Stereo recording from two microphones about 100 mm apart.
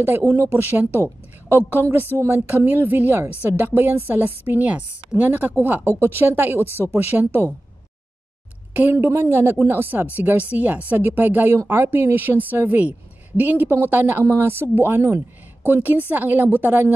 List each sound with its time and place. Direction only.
0.0 s speech: 25° right (ahead or behind)
8.7 s speech: 25° right (ahead or behind)